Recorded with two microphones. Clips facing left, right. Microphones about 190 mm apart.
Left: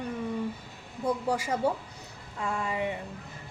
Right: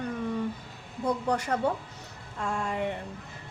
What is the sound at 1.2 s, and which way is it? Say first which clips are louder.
A woman's voice: even; 10° left (ahead or behind).